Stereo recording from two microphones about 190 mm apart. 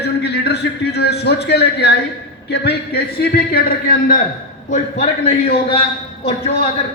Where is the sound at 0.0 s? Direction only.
60° left (ahead or behind).